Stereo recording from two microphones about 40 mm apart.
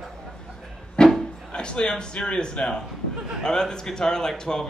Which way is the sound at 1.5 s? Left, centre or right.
Left.